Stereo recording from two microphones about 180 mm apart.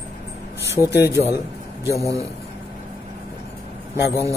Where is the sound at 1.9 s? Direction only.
15° left (ahead or behind).